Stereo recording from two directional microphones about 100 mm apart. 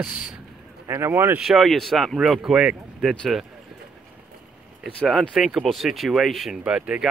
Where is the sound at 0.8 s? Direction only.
25° right (ahead or behind).